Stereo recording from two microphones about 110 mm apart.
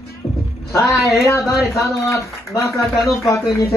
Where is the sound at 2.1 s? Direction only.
30° left (ahead or behind).